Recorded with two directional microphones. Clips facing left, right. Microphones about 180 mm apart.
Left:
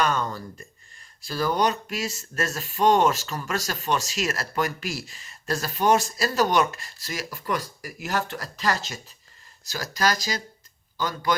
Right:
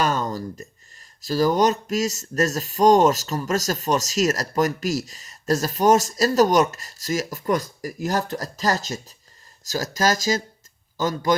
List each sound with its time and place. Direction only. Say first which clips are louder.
0.0 s speech: right 2 dB; 40° right (ahead or behind)